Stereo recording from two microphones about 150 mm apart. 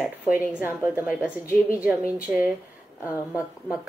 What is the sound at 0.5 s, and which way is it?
A woman's voice, 10° right (ahead or behind).